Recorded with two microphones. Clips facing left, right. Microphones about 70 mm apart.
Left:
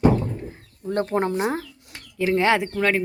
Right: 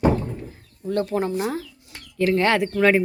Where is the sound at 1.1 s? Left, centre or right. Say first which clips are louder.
Left 1 dB; left.